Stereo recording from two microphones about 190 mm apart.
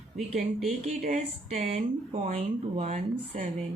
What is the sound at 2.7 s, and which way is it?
Speech, 35° right (ahead or behind).